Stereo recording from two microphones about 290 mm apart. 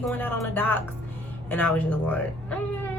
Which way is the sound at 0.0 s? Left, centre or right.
Centre.